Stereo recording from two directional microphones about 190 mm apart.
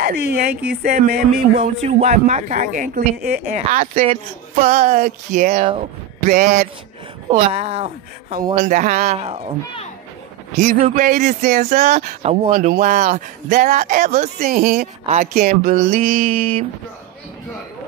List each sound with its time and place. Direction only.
0.0 s speech: 55° right (ahead or behind)
1.8 s speech: 40° right (ahead or behind)
10.6 s speech: 45° right (ahead or behind)
12.5 s speech: 45° right (ahead or behind)
16.3 s speech: 30° right (ahead or behind)